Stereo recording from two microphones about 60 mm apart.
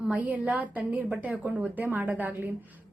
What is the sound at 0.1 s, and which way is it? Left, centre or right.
A woman's voice, right.